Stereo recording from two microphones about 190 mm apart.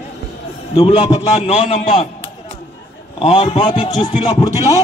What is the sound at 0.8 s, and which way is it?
Speech, 25° left (ahead or behind).